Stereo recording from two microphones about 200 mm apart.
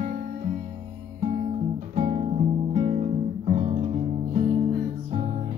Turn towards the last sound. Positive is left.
turn(degrees=-30)  # may be behind; listen again after turning